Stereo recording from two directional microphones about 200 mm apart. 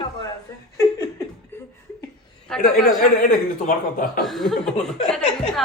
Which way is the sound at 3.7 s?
45° left (ahead or behind).